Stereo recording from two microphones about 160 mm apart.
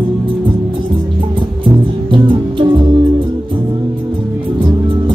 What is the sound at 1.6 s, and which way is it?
Music, 35° right (ahead or behind).